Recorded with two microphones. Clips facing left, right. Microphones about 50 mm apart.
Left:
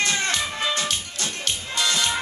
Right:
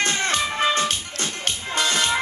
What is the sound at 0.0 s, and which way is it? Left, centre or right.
Music, right.